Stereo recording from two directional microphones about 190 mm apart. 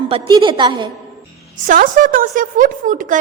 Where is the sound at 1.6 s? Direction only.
45° right (ahead or behind).